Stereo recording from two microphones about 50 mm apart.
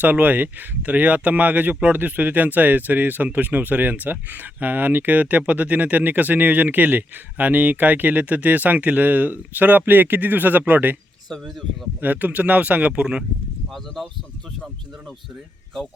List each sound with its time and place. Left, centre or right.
0.0 s speech: right
11.9 s speech: right
13.7 s speech: centre